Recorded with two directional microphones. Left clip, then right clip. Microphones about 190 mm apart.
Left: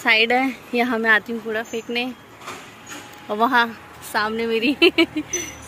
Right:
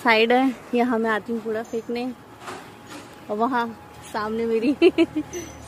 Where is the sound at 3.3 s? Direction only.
15° left (ahead or behind).